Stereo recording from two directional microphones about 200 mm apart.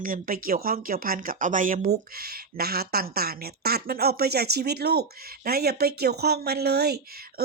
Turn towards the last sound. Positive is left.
turn(degrees=-55)  # may be behind; listen again after turning